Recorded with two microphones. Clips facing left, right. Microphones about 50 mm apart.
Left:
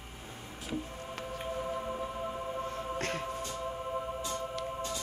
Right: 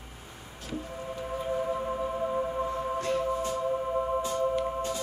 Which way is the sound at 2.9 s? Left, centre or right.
Left.